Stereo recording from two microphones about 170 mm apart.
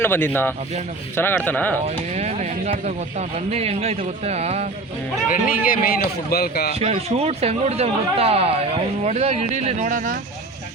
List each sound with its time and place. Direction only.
0.0 s speech: 10° left (ahead or behind)
2.1 s speech: 40° right (ahead or behind)
5.3 s a man's voice: 55° left (ahead or behind)
6.7 s speech: 35° right (ahead or behind)